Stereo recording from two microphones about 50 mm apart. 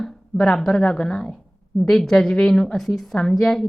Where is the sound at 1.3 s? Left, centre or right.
Centre.